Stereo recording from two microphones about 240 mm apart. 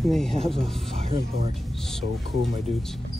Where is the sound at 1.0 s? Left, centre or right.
Right.